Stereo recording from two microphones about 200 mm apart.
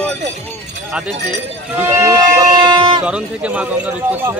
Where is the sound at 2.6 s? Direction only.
25° right (ahead or behind).